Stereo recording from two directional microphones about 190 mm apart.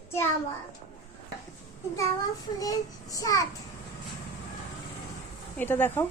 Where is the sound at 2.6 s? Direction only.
20° left (ahead or behind).